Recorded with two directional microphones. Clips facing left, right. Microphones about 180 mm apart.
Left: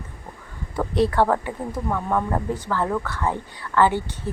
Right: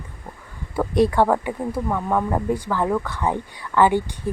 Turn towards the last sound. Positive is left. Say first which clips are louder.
# right 2 dB
turn(degrees=-15)  # may be behind; listen again after turning